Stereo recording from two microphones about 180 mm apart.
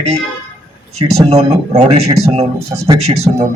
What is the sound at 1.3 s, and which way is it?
A man's voice, 35° right (ahead or behind).